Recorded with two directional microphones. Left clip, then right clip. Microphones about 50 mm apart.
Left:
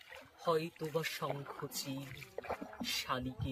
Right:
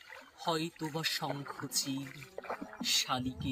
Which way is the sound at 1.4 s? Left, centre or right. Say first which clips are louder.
Right 2 dB; right.